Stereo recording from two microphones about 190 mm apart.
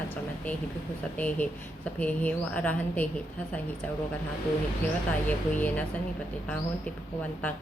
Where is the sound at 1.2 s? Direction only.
10° left (ahead or behind).